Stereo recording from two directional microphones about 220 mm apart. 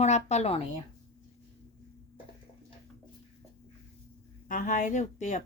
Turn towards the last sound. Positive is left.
turn(degrees=30)  # may be behind; listen again after turning